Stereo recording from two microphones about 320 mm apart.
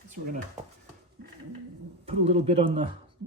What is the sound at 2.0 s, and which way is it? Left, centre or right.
Speech, centre.